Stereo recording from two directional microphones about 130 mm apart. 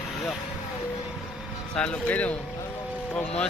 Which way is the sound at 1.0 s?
Centre (ahead or behind).